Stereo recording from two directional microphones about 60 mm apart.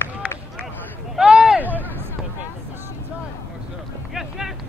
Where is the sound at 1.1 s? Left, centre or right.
Centre.